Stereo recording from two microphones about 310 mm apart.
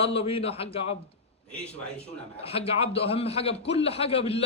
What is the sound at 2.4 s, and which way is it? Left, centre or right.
A man's voice, centre.